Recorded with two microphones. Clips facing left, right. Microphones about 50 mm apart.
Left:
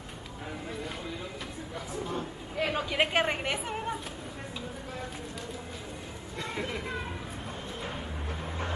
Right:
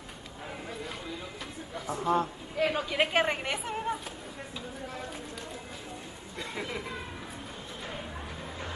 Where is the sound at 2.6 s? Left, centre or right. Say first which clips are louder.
Right 1 dB; centre.